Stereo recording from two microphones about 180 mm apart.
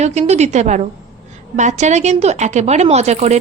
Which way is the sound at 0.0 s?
40° right (ahead or behind).